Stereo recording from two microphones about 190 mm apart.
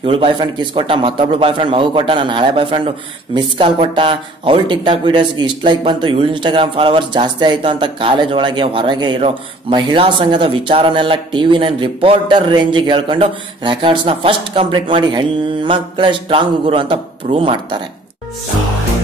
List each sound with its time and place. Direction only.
0.0 s speech: 25° right (ahead or behind)